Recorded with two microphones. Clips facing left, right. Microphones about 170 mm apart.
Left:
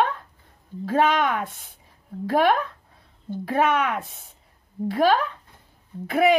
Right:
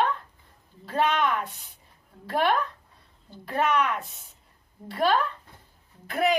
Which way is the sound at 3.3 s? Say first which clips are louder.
Left 4 dB; 55° left (ahead or behind).